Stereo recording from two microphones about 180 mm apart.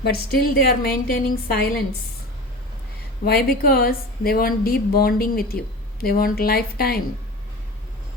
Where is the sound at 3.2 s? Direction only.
60° left (ahead or behind).